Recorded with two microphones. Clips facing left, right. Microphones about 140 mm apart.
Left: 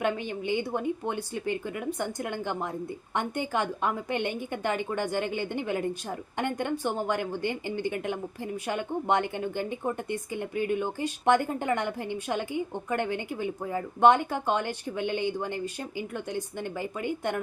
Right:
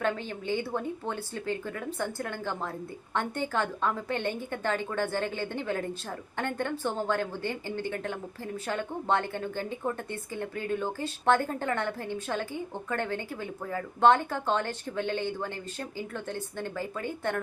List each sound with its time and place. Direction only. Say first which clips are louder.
0.0 s a woman's voice: left 2 dB; 15° left (ahead or behind)